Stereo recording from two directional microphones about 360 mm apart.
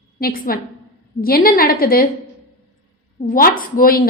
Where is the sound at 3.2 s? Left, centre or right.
Left.